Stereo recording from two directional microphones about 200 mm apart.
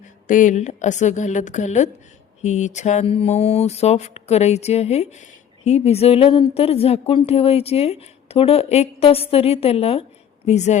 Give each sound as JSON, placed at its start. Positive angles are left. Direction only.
{"t": 0.0, "sound": "speech", "side_deg": 40}